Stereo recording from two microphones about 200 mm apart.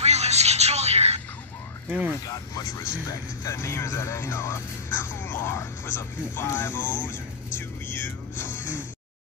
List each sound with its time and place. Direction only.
0.0 s telephone: 35° right (ahead or behind)
1.9 s speech: 10° right (ahead or behind)
2.2 s speech: 20° left (ahead or behind)
8.5 s music: 40° left (ahead or behind)